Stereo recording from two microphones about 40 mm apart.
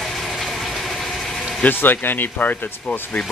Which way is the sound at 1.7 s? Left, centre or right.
Left.